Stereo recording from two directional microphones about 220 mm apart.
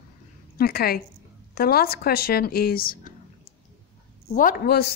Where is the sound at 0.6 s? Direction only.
45° left (ahead or behind).